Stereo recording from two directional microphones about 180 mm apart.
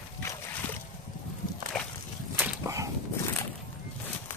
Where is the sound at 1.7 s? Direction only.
Centre (ahead or behind).